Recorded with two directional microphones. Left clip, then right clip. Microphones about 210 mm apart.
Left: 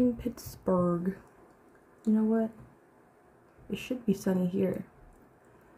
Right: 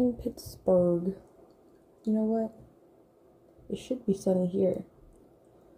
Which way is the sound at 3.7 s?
Centre (ahead or behind).